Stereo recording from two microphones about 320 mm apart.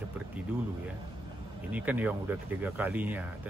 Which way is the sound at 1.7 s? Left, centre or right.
Centre.